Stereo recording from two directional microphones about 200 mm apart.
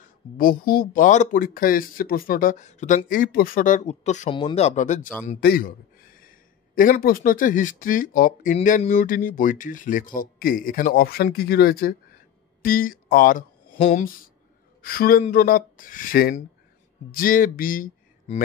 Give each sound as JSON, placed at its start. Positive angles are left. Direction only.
{"t": 0.0, "sound": "a man's voice", "side_deg": 45}